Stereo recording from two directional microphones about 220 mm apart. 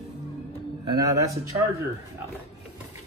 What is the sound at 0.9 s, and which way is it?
Speech, 15° right (ahead or behind).